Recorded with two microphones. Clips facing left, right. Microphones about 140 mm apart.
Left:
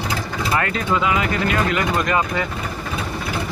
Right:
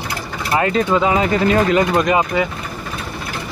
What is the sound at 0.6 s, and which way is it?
Speech, 30° right (ahead or behind).